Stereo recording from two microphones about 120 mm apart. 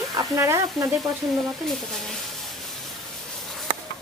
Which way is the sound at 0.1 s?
30° right (ahead or behind).